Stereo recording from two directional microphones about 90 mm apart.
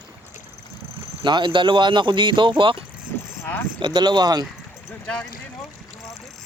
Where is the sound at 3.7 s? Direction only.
60° right (ahead or behind).